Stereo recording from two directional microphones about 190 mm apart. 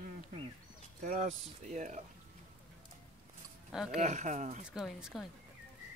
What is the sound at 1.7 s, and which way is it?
Speech, 40° right (ahead or behind).